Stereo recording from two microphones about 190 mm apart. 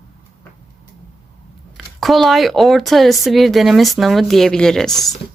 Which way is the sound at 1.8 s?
Centre (ahead or behind).